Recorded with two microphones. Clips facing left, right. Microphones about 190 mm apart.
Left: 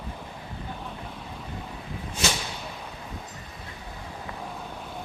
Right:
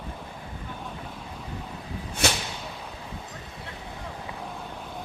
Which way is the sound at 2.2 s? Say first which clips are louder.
Right 2 dB; 60° right (ahead or behind).